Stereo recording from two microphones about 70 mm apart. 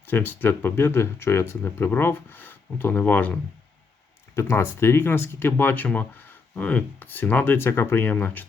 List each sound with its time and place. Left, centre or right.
0.0 s speech: left
4.4 s speech: left